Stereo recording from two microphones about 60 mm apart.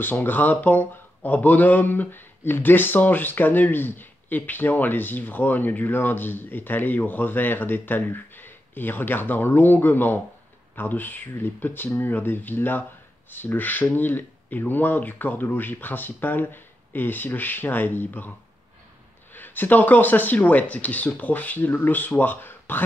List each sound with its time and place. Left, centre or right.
0.0 s speech: left
19.3 s speech: left